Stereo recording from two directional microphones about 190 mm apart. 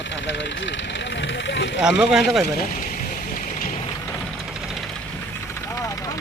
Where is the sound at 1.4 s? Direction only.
70° left (ahead or behind).